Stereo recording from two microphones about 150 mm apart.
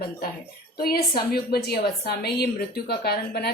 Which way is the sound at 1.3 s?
90° left.